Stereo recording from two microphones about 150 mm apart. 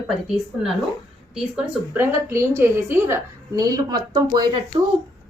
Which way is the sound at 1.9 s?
15° right (ahead or behind).